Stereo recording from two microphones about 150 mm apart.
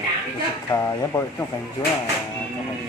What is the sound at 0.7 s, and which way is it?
Speech, 25° left (ahead or behind).